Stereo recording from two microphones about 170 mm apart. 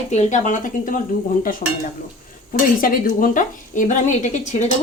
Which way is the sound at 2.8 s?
55° left (ahead or behind).